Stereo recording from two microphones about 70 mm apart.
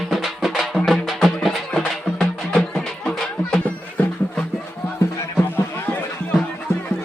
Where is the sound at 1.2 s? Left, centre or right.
Centre.